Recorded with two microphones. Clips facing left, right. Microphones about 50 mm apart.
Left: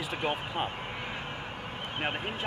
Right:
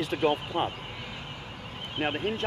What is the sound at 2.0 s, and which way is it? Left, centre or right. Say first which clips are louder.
Speech: right 5 dB; centre.